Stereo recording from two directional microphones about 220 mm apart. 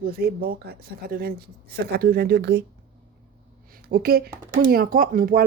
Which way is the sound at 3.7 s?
40° right (ahead or behind).